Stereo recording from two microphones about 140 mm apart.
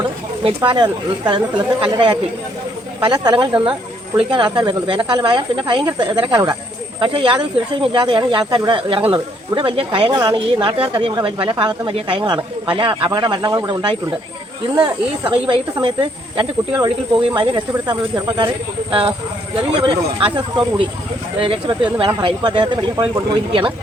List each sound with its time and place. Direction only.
0.0 s speech: 35° right (ahead or behind)